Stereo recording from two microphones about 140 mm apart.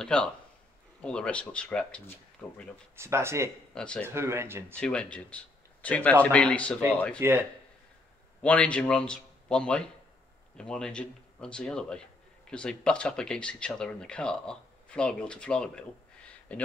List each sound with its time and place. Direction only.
0.0 s speech: 5° left (ahead or behind)
3.0 s speech: 20° right (ahead or behind)
3.7 s speech: 5° left (ahead or behind)
4.1 s speech: 20° right (ahead or behind)
4.7 s speech: 5° left (ahead or behind)
7.2 s speech: 15° right (ahead or behind)
8.4 s a man's voice: 10° left (ahead or behind)